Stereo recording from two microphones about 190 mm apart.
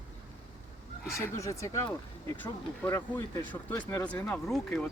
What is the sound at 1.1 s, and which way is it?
Speech, 15° left (ahead or behind).